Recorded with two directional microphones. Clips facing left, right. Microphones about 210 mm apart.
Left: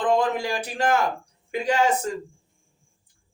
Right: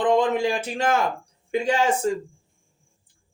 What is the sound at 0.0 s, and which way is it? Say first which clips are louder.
A woman's voice: right 3 dB; 20° right (ahead or behind).